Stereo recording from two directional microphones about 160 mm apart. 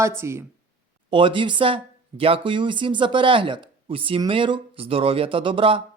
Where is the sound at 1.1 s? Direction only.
30° right (ahead or behind).